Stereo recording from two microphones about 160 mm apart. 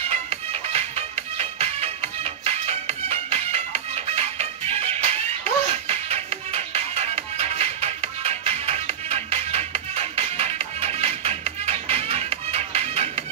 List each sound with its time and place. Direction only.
0.1 s music: 40° right (ahead or behind)